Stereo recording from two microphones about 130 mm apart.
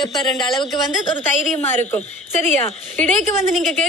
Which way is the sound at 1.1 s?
15° left (ahead or behind).